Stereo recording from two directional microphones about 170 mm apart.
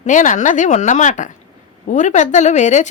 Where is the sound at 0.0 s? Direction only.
50° left (ahead or behind).